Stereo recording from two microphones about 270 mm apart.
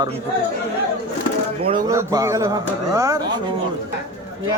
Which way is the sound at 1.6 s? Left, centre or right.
Centre.